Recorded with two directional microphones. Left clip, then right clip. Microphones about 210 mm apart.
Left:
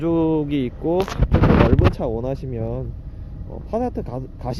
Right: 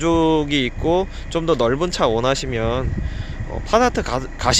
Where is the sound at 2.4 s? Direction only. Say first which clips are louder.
Right 7 dB; 5° right (ahead or behind).